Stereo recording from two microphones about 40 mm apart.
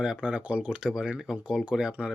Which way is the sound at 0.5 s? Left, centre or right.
Right.